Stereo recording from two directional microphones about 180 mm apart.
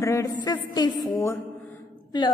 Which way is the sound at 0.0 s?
15° left (ahead or behind).